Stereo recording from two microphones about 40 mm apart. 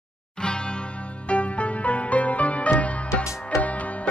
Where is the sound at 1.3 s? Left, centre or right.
Left.